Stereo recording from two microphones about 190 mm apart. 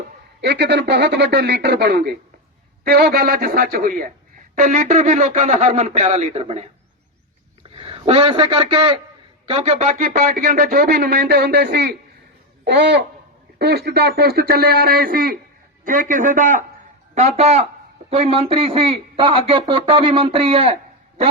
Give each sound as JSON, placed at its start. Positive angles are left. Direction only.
{"t": 0.4, "sound": "speech", "side_deg": -65}
{"t": 7.8, "sound": "a man's voice", "side_deg": -30}